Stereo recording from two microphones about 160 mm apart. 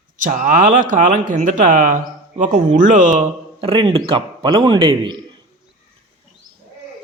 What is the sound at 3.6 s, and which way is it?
A man's voice, 35° right (ahead or behind).